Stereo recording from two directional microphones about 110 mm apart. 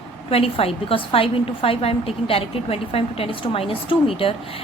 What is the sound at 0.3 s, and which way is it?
A woman's voice, 60° left (ahead or behind).